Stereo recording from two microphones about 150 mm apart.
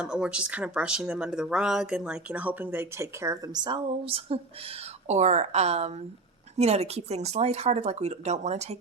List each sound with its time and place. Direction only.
0.0 s speech: 5° right (ahead or behind); by 4.4 s 35° right (ahead or behind)
5.0 s speech: 50° right (ahead or behind)